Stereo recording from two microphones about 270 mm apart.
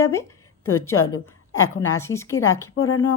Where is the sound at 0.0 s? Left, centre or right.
Centre.